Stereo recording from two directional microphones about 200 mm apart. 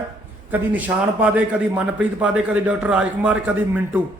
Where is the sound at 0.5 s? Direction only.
10° right (ahead or behind).